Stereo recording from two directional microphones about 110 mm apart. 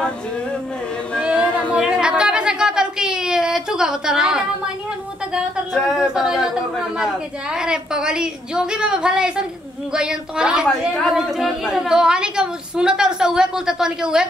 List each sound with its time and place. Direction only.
1.2 s a sound: 10° right (ahead or behind)
5.3 s a woman's voice: centre (ahead or behind)
7.5 s a woman's voice: 5° right (ahead or behind)